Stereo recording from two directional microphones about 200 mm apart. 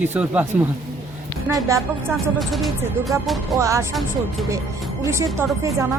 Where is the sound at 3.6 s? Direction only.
15° right (ahead or behind).